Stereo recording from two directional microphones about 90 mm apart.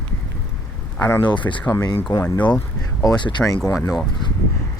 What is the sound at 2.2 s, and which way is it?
Speech, 15° left (ahead or behind).